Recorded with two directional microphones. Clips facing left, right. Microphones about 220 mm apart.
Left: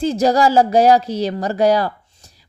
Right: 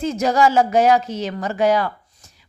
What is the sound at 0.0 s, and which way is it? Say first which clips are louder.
Speech: left 3 dB; 35° left (ahead or behind).